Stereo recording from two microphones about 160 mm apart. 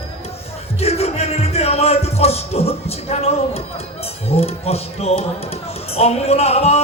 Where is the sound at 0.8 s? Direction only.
40° left (ahead or behind).